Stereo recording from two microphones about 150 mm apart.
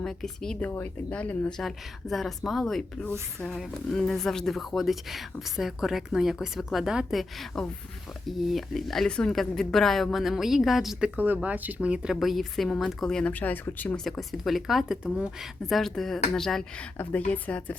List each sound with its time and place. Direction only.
0.0 s a woman's voice: 5° left (ahead or behind)